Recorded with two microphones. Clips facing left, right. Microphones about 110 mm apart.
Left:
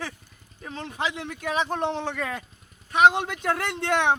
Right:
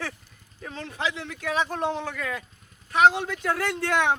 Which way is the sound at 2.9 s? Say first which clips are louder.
Left 1 dB; 20° left (ahead or behind).